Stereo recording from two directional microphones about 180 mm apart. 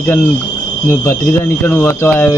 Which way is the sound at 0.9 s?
15° left (ahead or behind).